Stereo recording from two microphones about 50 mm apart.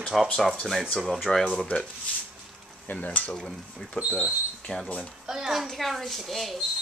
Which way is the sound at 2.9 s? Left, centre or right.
Left.